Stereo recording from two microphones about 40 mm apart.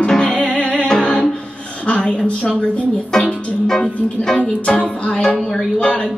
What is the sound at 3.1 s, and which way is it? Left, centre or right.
Music, centre.